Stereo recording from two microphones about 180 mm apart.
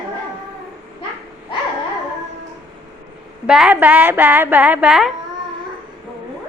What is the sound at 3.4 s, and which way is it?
Speech, 5° right (ahead or behind).